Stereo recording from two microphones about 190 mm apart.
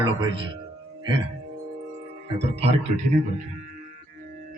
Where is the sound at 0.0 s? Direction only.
25° right (ahead or behind).